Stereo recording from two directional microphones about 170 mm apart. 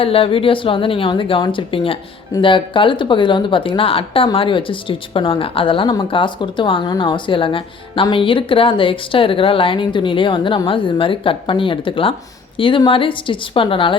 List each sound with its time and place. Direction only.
0.0 s speech: 35° left (ahead or behind)